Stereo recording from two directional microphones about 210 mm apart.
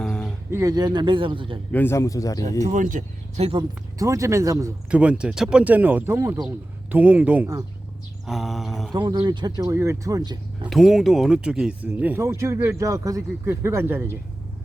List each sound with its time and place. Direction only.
0.0 s a sound: 5° left (ahead or behind)
0.5 s speech: 15° right (ahead or behind)
1.7 s a man's voice: 10° left (ahead or behind)
2.6 s speech: 35° right (ahead or behind)
3.9 s speech: 15° right (ahead or behind)
8.3 s a sound: centre (ahead or behind)
8.9 s speech: 20° right (ahead or behind)
10.7 s speech: centre (ahead or behind)